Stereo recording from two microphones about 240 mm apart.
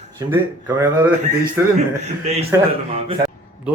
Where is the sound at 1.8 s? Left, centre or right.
Right.